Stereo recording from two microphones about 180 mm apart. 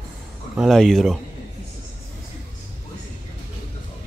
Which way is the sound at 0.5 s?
Centre (ahead or behind).